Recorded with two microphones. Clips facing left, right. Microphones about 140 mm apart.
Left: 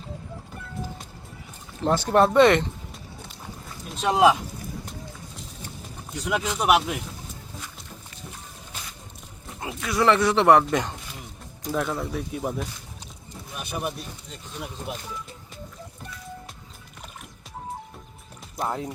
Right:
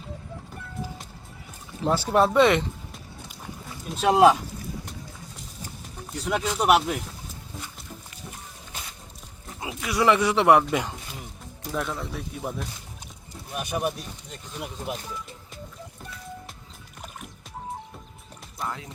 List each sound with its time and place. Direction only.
1.8 s speech: 5° right (ahead or behind)
6.2 s speech: 5° left (ahead or behind)
9.6 s speech: 10° right (ahead or behind)
13.7 s speech: 5° right (ahead or behind)
18.6 s speech: 35° left (ahead or behind)